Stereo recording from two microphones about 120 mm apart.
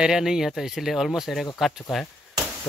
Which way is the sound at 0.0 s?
5° right (ahead or behind).